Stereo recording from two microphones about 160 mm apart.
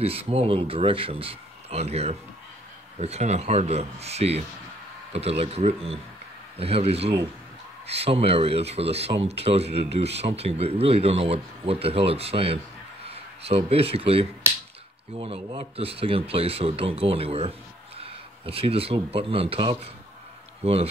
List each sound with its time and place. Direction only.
0.0 s speech: 40° right (ahead or behind)